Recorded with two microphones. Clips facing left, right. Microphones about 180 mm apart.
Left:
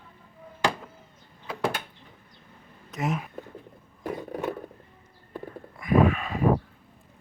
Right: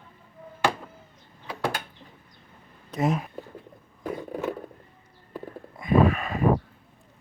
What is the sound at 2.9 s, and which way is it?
Speech, 35° right (ahead or behind).